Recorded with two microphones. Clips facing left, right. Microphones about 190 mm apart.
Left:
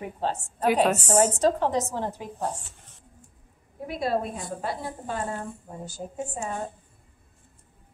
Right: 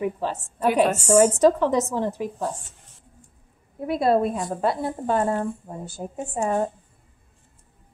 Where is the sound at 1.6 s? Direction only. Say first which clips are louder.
Right 4 dB; 65° right (ahead or behind).